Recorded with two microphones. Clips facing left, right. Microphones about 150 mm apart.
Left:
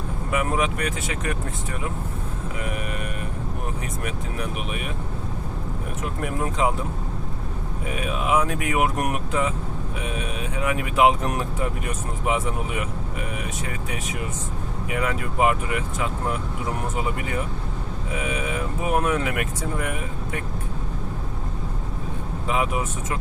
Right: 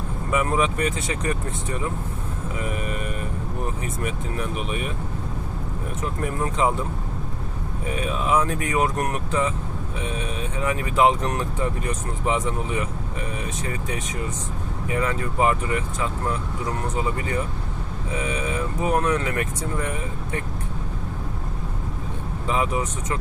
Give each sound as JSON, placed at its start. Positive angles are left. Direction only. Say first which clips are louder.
{"t": 0.3, "sound": "speech", "louder": "right 2 dB", "side_deg": 0}
{"t": 6.0, "sound": "speech", "louder": "right 1 dB", "side_deg": 0}
{"t": 8.1, "sound": "speech", "louder": "even", "side_deg": 10}
{"t": 10.6, "sound": "speech", "louder": "even", "side_deg": 10}
{"t": 14.9, "sound": "speech", "louder": "right 1 dB", "side_deg": 5}
{"t": 18.9, "sound": "speech", "louder": "even", "side_deg": 10}
{"t": 22.4, "sound": "speech", "louder": "right 1 dB", "side_deg": 5}